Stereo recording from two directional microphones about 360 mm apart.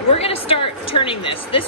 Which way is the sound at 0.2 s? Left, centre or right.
Centre.